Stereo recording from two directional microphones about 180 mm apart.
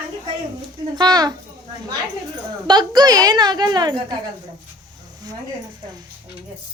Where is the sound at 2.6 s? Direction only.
25° right (ahead or behind).